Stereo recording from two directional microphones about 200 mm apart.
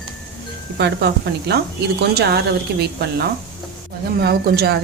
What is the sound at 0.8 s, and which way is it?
Speech, 55° right (ahead or behind).